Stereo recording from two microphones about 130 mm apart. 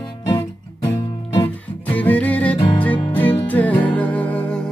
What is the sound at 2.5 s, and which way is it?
Music, 40° left (ahead or behind).